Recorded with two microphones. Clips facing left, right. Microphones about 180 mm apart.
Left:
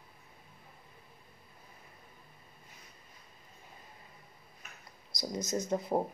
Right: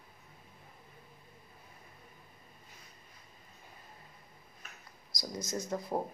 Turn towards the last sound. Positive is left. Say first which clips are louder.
# left 4 dB
turn(degrees=20)  # may be behind; listen again after turning